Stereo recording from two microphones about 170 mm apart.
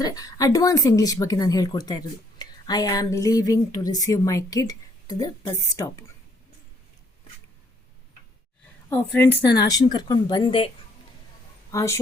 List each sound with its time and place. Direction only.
0.0 s a woman's voice: 20° left (ahead or behind)
9.1 s speech: 10° left (ahead or behind)
9.6 s a woman's voice: 25° left (ahead or behind)
11.7 s speech: 20° left (ahead or behind)